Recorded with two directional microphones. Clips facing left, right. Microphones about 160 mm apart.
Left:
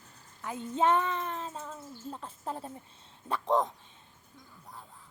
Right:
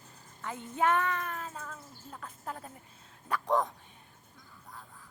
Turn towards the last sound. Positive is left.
turn(degrees=20)  # may be behind; listen again after turning